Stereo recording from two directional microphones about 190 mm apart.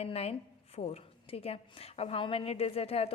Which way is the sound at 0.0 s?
35° left (ahead or behind).